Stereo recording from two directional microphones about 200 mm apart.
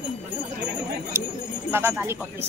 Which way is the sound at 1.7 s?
10° right (ahead or behind).